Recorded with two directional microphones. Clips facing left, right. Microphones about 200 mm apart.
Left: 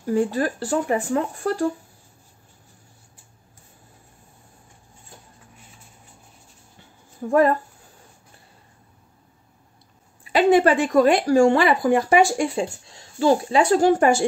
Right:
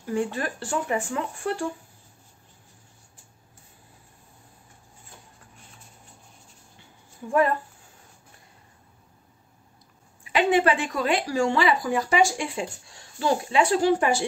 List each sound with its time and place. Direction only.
0.0 s speech: 35° left (ahead or behind)
7.2 s speech: 45° left (ahead or behind)
10.3 s speech: 40° left (ahead or behind)
12.5 s speech: 25° left (ahead or behind)
13.5 s speech: 40° left (ahead or behind)